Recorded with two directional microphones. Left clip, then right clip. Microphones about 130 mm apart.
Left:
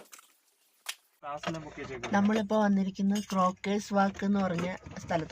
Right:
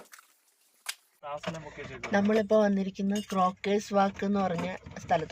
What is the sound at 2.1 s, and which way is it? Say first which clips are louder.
Speech: right 4 dB; 25° left (ahead or behind).